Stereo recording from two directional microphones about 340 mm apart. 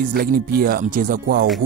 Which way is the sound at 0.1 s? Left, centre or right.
Right.